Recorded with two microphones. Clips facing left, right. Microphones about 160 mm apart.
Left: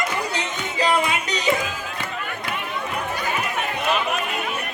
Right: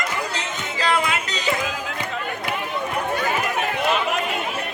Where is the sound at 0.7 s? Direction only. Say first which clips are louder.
Left 1 dB; 15° left (ahead or behind).